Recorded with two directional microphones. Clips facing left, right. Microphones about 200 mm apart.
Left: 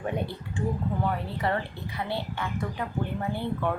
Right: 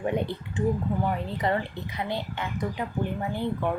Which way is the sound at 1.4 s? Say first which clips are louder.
Right 2 dB; 20° right (ahead or behind).